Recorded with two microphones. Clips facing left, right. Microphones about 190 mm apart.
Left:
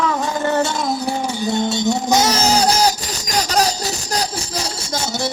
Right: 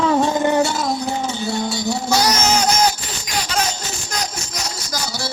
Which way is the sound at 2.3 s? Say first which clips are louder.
Left 2 dB; 35° left (ahead or behind).